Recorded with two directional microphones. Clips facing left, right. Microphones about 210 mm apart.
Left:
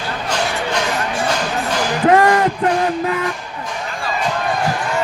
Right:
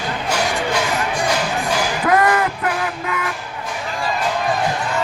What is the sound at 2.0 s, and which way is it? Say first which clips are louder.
Music: left 4 dB; 30° left (ahead or behind).